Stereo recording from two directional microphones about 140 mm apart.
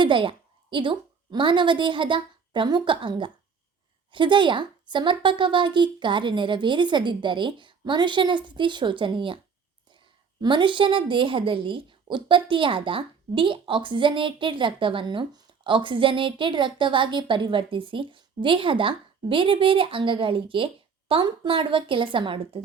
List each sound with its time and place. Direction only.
0.0 s a woman's voice: 35° right (ahead or behind)
10.4 s a woman's voice: 35° right (ahead or behind)